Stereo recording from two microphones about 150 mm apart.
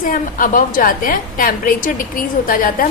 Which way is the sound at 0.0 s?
65° left (ahead or behind).